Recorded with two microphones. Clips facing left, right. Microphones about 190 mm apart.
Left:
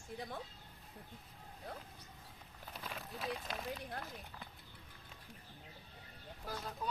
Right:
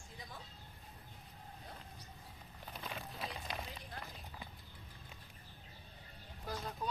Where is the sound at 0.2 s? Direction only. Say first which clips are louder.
Left 7 dB; 60° left (ahead or behind).